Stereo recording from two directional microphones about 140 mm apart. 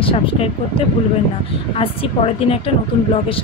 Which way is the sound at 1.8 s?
40° left (ahead or behind).